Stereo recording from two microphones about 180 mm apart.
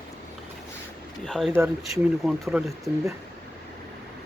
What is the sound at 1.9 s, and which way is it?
Speech, centre (ahead or behind).